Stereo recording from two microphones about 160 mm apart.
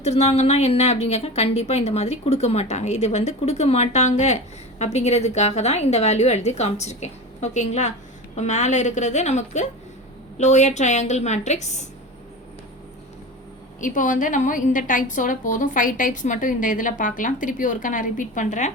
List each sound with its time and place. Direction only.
0.0 s a woman's voice: 40° left (ahead or behind)
13.8 s a woman's voice: 55° left (ahead or behind)